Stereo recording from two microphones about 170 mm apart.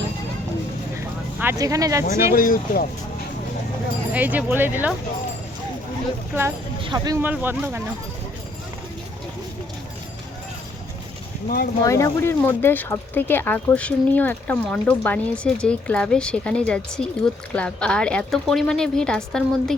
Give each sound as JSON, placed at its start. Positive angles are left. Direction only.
{"t": 1.4, "sound": "speech", "side_deg": -15}
{"t": 2.3, "sound": "speech", "side_deg": 55}
{"t": 4.1, "sound": "speech", "side_deg": -10}
{"t": 6.8, "sound": "speech", "side_deg": -25}
{"t": 7.2, "sound": "speech", "side_deg": -10}
{"t": 11.4, "sound": "speech", "side_deg": 65}
{"t": 11.8, "sound": "speech", "side_deg": 20}